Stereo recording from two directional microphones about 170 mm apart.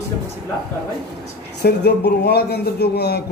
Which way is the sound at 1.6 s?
75° left (ahead or behind).